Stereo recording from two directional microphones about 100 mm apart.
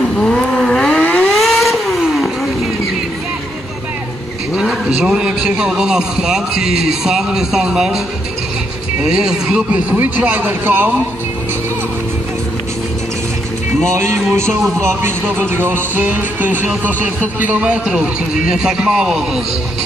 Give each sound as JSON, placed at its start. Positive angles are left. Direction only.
{"t": 0.2, "sound": "vehicle", "side_deg": 5}
{"t": 1.3, "sound": "vehicle", "side_deg": 0}
{"t": 4.6, "sound": "a man's voice", "side_deg": -5}
{"t": 9.0, "sound": "music", "side_deg": -5}
{"t": 13.8, "sound": "speech", "side_deg": -30}
{"t": 14.8, "sound": "music", "side_deg": -25}